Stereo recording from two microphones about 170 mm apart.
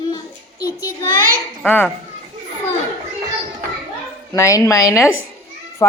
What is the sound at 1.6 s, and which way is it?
Speech, 10° left (ahead or behind).